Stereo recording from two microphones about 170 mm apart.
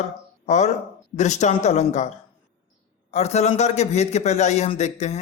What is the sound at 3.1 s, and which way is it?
A man's voice, 40° left (ahead or behind).